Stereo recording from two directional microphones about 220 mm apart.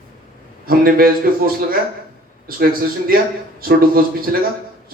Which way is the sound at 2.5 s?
40° right (ahead or behind).